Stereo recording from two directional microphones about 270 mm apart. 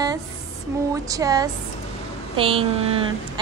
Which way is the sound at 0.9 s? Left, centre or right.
Centre.